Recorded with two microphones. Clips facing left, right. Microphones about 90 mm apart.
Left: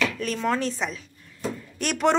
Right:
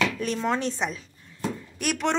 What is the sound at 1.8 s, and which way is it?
Speech, 10° right (ahead or behind).